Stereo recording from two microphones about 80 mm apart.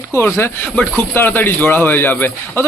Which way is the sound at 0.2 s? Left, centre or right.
Left.